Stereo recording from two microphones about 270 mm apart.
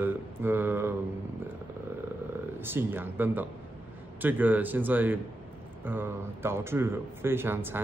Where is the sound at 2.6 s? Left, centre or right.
Centre.